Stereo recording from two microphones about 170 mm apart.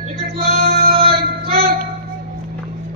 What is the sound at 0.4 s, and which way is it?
Male singing, 65° right (ahead or behind).